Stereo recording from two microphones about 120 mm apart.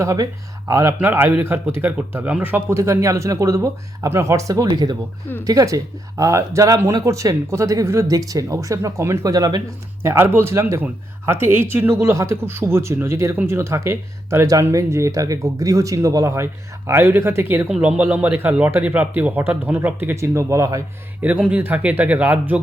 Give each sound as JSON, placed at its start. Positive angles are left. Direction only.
{"t": 0.0, "sound": "speech", "side_deg": -25}
{"t": 10.0, "sound": "speech", "side_deg": -20}
{"t": 21.2, "sound": "speech", "side_deg": -10}